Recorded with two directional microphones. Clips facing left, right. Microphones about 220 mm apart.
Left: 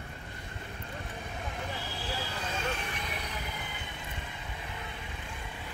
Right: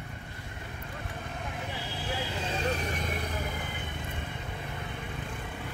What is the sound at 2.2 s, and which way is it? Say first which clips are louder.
Vehicle: right 3 dB; 20° right (ahead or behind).